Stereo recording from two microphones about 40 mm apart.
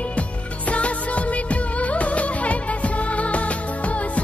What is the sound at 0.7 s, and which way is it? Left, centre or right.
Music of bollywood, left.